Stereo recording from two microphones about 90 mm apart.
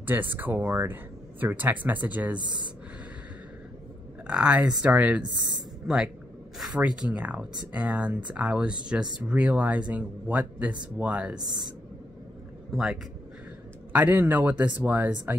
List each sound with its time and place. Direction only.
0.0 s speech: 20° right (ahead or behind)
2.3 s speech: 55° right (ahead or behind)
4.3 s speech: 15° right (ahead or behind)
5.9 s speech: 5° right (ahead or behind)
12.7 s speech: centre (ahead or behind)
13.9 s speech: 20° right (ahead or behind)